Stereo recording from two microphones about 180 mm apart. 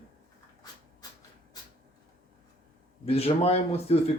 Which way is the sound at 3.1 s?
35° left (ahead or behind).